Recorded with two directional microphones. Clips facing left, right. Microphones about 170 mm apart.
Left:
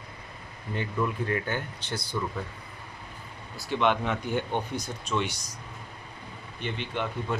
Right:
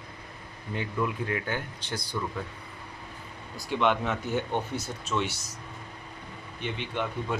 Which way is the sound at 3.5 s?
15° right (ahead or behind).